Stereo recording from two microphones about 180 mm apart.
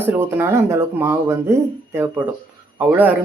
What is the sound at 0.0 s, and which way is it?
Speech, 10° right (ahead or behind).